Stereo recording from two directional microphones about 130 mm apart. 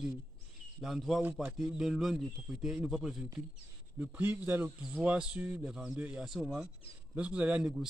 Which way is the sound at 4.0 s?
15° right (ahead or behind).